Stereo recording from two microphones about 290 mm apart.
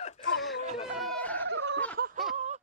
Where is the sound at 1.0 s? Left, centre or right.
Centre.